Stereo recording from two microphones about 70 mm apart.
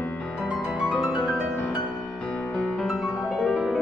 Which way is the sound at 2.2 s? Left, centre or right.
Centre.